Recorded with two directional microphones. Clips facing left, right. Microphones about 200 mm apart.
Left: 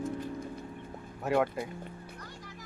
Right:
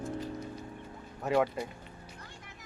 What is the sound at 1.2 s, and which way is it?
Speech, centre (ahead or behind).